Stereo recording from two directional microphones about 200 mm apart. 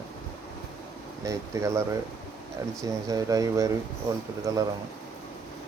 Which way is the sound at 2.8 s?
15° right (ahead or behind).